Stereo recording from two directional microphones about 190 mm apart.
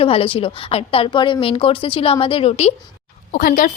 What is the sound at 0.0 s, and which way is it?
A woman's voice, 30° left (ahead or behind).